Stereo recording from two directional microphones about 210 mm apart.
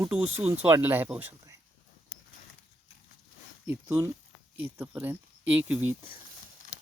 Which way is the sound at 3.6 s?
10° right (ahead or behind).